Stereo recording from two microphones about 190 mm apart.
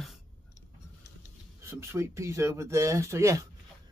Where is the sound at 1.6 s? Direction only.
15° right (ahead or behind).